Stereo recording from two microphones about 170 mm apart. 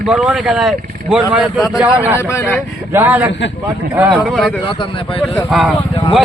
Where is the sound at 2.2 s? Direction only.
15° left (ahead or behind).